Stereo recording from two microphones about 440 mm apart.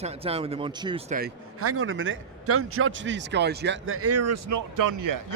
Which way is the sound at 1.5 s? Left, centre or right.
Right.